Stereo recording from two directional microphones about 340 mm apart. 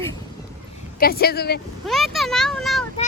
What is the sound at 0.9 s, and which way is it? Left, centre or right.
Speech, left.